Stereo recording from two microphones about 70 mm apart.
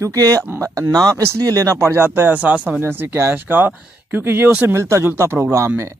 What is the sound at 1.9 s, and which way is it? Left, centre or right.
Speech, right.